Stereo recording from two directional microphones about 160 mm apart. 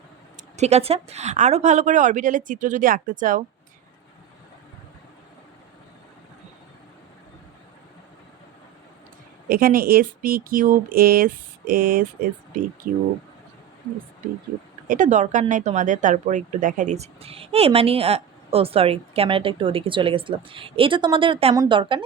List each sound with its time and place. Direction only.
0.5 s a woman's voice: 45° right (ahead or behind)
9.5 s speech: 65° right (ahead or behind)
14.8 s speech: 50° right (ahead or behind); by 22.0 s 30° right (ahead or behind)